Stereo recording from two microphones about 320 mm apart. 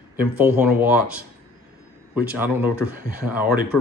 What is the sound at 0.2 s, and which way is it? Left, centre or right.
Speech, centre.